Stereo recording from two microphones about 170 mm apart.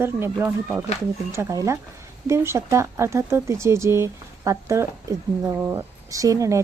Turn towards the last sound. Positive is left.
turn(degrees=-20)  # may be behind; listen again after turning